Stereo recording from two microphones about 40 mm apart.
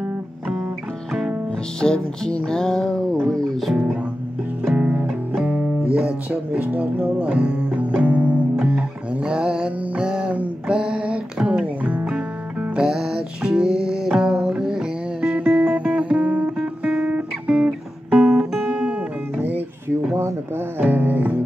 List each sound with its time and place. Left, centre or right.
1.8 s music: centre
4.6 s music: right
5.9 s speech: right
7.7 s music: right
10.7 s a sound: right
11.8 s music: right
12.7 s music: centre
15.3 s music: right
16.5 s music: right
18.7 s music: right
20.8 s music: right